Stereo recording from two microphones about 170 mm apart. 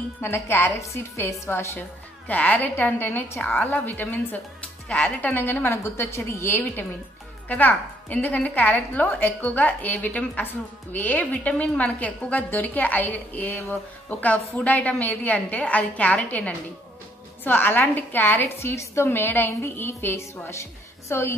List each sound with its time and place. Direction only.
0.2 s a woman's voice: 15° left (ahead or behind)